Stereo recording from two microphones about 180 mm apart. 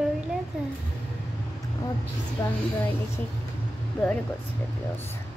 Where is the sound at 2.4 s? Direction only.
10° left (ahead or behind).